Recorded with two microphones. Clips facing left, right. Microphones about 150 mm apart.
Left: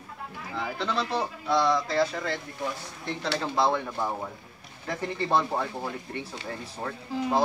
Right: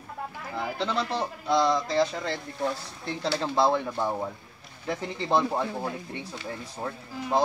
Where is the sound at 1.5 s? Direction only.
20° right (ahead or behind).